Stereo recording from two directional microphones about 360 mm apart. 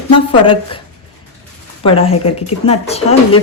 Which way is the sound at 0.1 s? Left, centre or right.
Centre.